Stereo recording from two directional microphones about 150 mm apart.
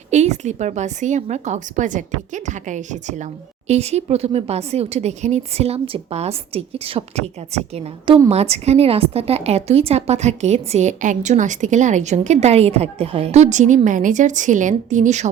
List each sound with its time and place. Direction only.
0.1 s a woman's voice: 50° right (ahead or behind)